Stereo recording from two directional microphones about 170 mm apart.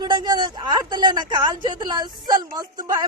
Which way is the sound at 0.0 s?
25° right (ahead or behind).